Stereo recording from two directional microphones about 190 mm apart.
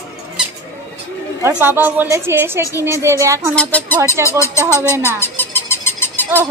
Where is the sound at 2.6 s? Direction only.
15° left (ahead or behind).